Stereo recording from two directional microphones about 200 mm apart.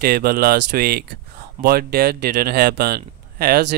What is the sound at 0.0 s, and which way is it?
Speech, 50° right (ahead or behind).